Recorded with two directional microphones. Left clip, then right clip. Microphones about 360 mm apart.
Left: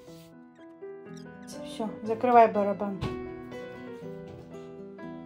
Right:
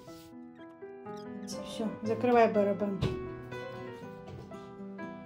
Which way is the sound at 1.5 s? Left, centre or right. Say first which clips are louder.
Left 2 dB; centre.